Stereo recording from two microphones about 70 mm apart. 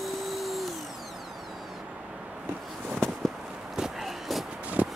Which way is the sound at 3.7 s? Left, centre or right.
Centre.